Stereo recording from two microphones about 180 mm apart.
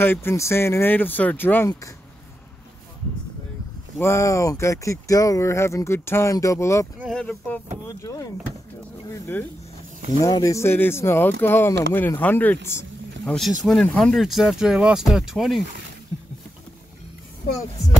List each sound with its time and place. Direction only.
0.0 s speech: 10° left (ahead or behind)
4.0 s speech: 15° left (ahead or behind)
7.2 s speech: 5° left (ahead or behind)
8.0 s speech: 20° left (ahead or behind)
10.2 s speech: 20° left (ahead or behind); by 15.6 s centre (ahead or behind)